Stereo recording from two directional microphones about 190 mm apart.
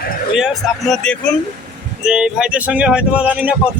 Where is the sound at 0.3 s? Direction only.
Centre (ahead or behind).